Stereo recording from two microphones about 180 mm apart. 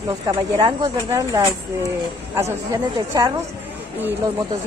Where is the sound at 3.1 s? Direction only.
20° right (ahead or behind).